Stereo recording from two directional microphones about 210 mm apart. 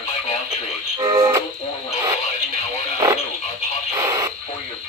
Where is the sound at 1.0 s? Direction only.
20° right (ahead or behind).